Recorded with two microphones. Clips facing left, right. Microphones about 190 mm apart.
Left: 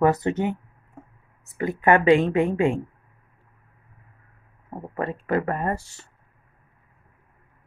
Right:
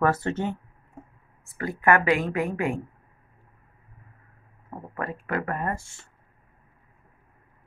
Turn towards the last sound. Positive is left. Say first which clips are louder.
# left 3 dB
turn(degrees=35)  # may be behind; listen again after turning